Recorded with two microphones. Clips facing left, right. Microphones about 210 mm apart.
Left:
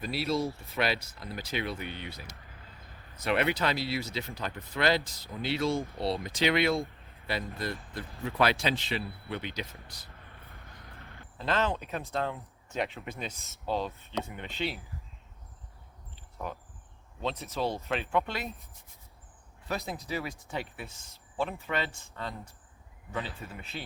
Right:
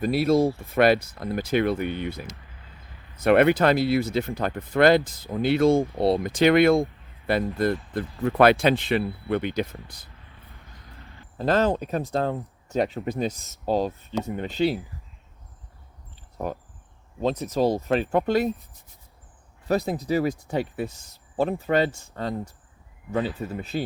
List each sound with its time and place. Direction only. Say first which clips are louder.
0.0 s speech: right 10 dB; 50° right (ahead or behind)
11.3 s speech: right 8 dB; 40° right (ahead or behind)
16.4 s speech: right 8 dB; 40° right (ahead or behind)
19.6 s speech: right 11 dB; 40° right (ahead or behind)